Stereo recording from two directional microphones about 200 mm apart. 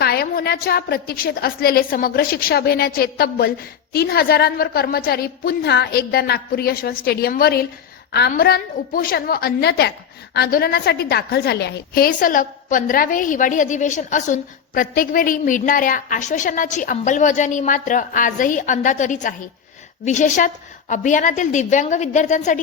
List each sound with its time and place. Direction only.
0.0 s a woman's voice: 50° left (ahead or behind)